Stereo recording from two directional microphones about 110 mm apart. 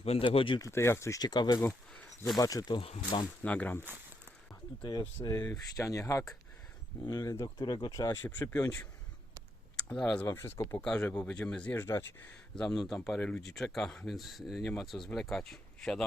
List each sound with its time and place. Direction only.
0.0 s speech: 65° left (ahead or behind)
0.3 s speech: 50° left (ahead or behind)
0.6 s speech: 25° left (ahead or behind)
1.2 s speech: 40° left (ahead or behind)
1.9 s a sound: 5° left (ahead or behind)
2.4 s speech: 35° left (ahead or behind)
3.4 s speech: 15° left (ahead or behind)
4.8 s speech: 40° left (ahead or behind)
8.1 s speech: 15° left (ahead or behind)
9.7 s speech: 5° left (ahead or behind)
10.2 s speech: 25° left (ahead or behind)
10.8 s speech: 10° left (ahead or behind)
11.8 s speech: 25° left (ahead or behind)
12.5 s speech: 5° left (ahead or behind)